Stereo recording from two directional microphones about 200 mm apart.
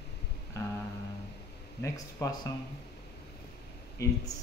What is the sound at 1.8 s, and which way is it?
Speech, 15° left (ahead or behind).